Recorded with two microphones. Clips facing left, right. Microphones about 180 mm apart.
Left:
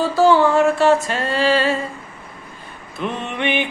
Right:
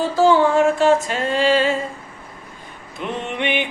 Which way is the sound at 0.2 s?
10° right (ahead or behind).